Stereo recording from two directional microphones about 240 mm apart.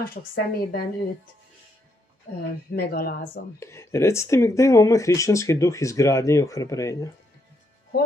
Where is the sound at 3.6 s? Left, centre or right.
Centre.